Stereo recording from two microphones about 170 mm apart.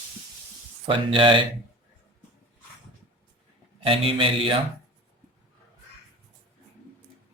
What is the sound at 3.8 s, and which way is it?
Speech, 30° right (ahead or behind).